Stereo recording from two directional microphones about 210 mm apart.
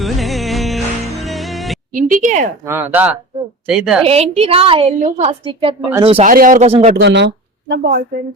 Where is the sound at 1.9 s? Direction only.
40° right (ahead or behind).